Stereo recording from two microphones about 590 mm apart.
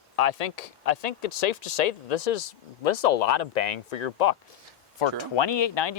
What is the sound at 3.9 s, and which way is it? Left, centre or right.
Speech, left.